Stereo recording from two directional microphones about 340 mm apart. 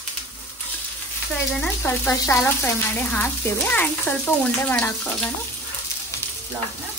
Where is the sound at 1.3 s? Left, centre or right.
Centre.